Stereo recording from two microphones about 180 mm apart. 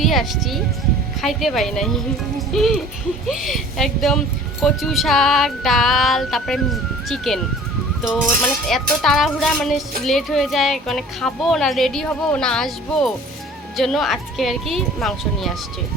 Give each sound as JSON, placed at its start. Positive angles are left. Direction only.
{"t": 0.0, "sound": "a woman's voice", "side_deg": 0}
{"t": 8.6, "sound": "a woman's voice", "side_deg": 0}